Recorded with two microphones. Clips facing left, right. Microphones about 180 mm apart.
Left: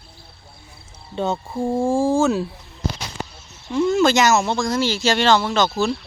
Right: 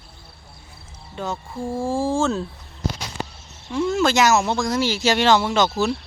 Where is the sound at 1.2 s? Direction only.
25° left (ahead or behind).